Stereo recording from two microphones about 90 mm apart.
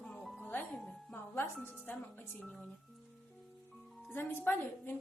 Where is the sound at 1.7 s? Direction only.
10° left (ahead or behind).